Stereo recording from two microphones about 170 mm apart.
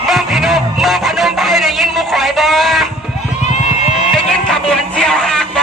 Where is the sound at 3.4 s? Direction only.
45° left (ahead or behind).